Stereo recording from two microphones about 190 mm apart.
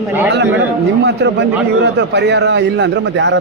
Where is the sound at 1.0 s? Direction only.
65° right (ahead or behind).